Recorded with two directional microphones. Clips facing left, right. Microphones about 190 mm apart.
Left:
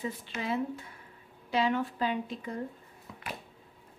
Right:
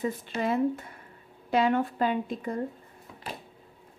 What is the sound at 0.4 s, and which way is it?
A woman's voice, 50° right (ahead or behind).